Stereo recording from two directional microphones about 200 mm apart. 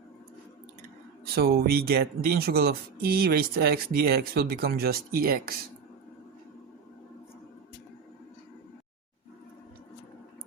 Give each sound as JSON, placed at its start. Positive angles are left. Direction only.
{"t": 1.4, "sound": "speech", "side_deg": -50}